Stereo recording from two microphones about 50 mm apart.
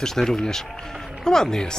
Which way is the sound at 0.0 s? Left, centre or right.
Centre.